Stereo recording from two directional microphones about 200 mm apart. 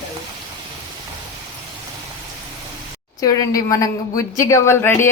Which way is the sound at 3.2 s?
15° left (ahead or behind).